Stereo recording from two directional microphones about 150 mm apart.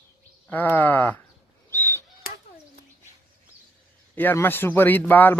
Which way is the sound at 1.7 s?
15° left (ahead or behind).